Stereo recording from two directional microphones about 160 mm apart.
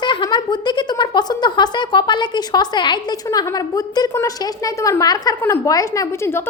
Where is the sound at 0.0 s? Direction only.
30° left (ahead or behind).